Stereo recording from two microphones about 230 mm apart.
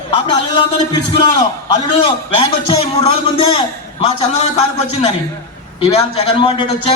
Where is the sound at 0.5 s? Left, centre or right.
Centre.